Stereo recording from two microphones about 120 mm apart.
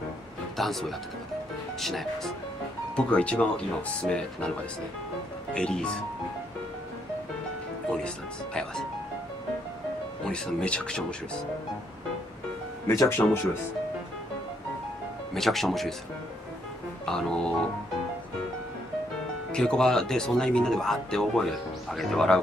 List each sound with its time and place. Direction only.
0.6 s speech: centre (ahead or behind)
5.5 s speech: 5° left (ahead or behind)
10.2 s speech: 5° left (ahead or behind)
12.8 s speech: 25° left (ahead or behind)
15.3 s speech: centre (ahead or behind)
17.0 s speech: 5° left (ahead or behind)
19.5 s speech: 5° left (ahead or behind)